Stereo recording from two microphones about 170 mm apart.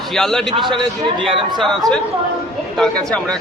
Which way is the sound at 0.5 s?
30° right (ahead or behind).